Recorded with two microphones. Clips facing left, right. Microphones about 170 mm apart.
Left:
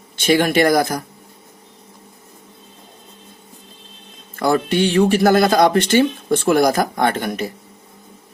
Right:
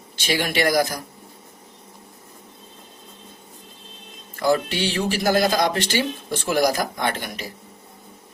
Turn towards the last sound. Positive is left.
turn(degrees=50)  # may be behind; listen again after turning